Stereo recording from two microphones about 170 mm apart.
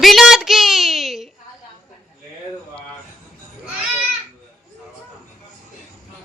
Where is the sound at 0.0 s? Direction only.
Centre (ahead or behind).